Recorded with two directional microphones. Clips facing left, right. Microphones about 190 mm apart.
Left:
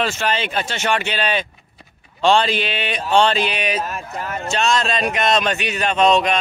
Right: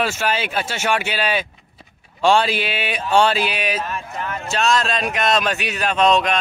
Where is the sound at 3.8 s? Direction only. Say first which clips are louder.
Left 1 dB; 40° left (ahead or behind).